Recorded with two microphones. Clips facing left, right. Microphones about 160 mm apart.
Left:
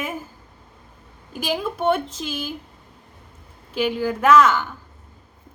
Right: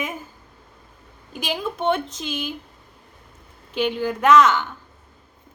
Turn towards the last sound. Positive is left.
turn(degrees=5)  # may be behind; listen again after turning